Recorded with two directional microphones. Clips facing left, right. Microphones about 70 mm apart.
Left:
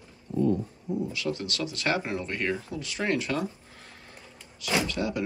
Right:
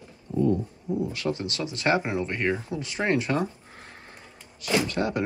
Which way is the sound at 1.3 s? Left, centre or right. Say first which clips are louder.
Right 1 dB; right.